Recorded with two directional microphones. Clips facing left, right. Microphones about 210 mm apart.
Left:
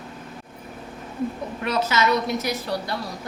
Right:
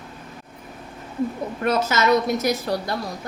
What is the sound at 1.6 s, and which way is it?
A woman's voice, 45° right (ahead or behind).